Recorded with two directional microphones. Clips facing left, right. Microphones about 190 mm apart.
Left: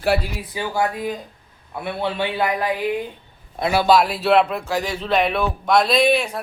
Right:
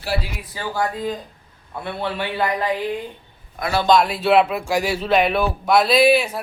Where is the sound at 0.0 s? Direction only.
60° left (ahead or behind).